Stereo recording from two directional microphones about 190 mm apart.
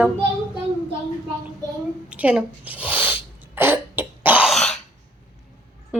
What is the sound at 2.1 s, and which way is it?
Cough, 5° right (ahead or behind).